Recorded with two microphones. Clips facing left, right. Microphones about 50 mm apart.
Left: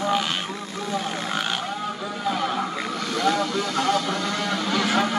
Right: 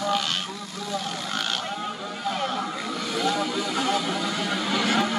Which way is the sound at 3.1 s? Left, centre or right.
Centre.